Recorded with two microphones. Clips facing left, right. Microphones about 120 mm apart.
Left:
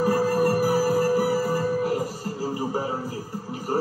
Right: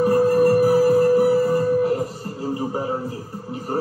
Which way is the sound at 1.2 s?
5° left (ahead or behind).